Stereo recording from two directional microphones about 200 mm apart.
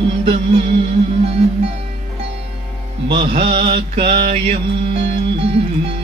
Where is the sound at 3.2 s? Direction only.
35° right (ahead or behind).